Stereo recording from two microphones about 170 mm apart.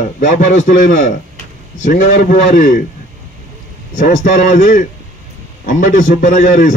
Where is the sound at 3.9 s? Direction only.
50° left (ahead or behind).